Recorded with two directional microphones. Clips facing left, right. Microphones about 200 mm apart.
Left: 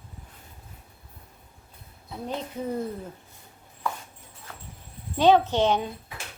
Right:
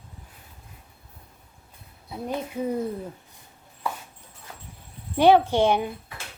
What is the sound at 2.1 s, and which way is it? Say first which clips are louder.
Speech: right 3 dB; 10° right (ahead or behind).